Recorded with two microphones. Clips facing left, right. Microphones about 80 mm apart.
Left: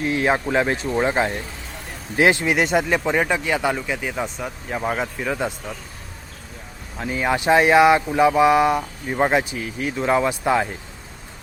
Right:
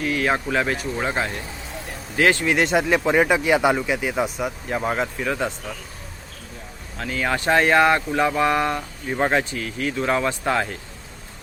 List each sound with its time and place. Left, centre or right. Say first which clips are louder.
0.0 s speech: left 2 dB; left
2.5 s speech: even; centre
7.0 s speech: left 2 dB; centre